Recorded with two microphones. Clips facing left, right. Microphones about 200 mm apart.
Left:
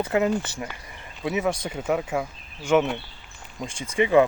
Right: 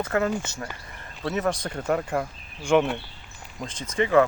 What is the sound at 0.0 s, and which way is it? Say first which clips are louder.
Speech: left 2 dB; 15° left (ahead or behind).